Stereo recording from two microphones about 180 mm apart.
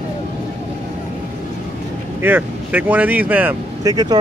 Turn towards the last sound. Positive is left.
turn(degrees=-20)  # may be behind; listen again after turning